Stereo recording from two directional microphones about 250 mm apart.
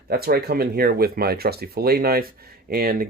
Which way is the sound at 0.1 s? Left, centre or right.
Right.